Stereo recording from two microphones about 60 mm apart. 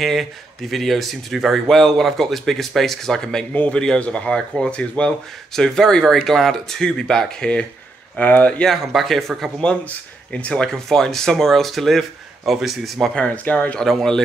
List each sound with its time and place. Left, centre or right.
0.0 s speech: centre
8.2 s speech: left
8.6 s speech: centre
9.6 s speech: centre
13.1 s speech: left
13.7 s speech: centre